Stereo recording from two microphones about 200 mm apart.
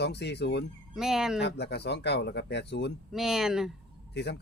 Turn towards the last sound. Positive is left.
turn(degrees=55)  # may be behind; listen again after turning